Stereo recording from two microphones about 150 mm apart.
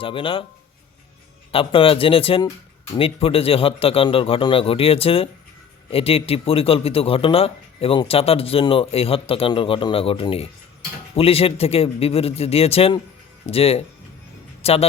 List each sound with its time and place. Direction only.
0.0 s speech: 35° left (ahead or behind)
1.5 s speech: 35° left (ahead or behind)